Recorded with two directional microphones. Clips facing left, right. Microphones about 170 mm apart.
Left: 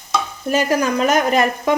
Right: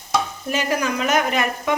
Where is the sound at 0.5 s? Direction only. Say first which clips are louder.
Left 5 dB; 40° left (ahead or behind).